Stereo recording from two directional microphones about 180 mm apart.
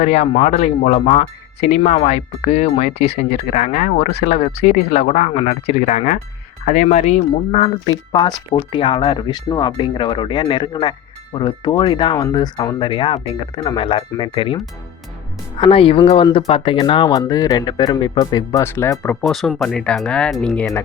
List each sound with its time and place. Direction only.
0.0 s speech: 35° left (ahead or behind)
8.5 s speech: 30° left (ahead or behind); by 19.1 s 15° left (ahead or behind)
19.2 s speech: centre (ahead or behind)